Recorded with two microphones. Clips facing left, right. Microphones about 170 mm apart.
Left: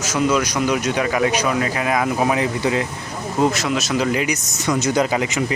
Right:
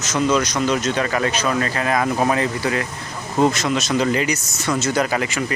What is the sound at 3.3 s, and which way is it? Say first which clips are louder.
Speech: right 1 dB; 5° left (ahead or behind).